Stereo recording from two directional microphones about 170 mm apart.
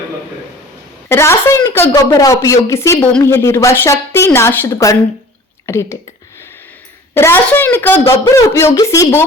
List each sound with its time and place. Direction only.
1.0 s speech: 15° left (ahead or behind)
7.1 s speech: 15° left (ahead or behind)